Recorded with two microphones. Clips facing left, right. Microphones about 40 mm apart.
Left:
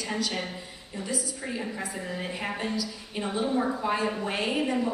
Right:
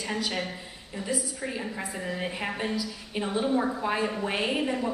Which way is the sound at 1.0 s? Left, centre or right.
Centre.